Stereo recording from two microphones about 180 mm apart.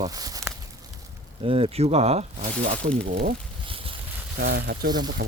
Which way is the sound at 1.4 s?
30° right (ahead or behind).